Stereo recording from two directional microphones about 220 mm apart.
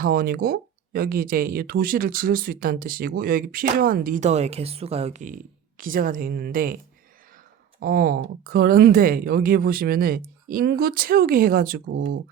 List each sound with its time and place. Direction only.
0.0 s speech: 40° right (ahead or behind)
7.8 s speech: 40° right (ahead or behind)